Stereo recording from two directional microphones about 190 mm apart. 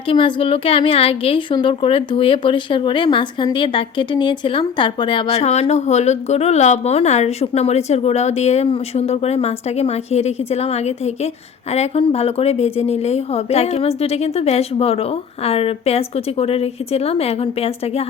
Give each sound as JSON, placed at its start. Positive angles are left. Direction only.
{"t": 0.1, "sound": "a woman's voice", "side_deg": 25}